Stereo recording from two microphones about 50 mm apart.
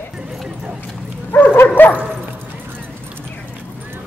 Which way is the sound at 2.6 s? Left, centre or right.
Right.